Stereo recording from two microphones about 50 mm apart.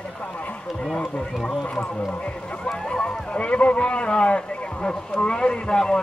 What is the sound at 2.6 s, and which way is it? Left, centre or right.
Speech, centre.